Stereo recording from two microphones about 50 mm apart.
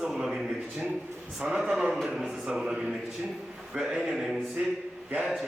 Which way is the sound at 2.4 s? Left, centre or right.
Centre.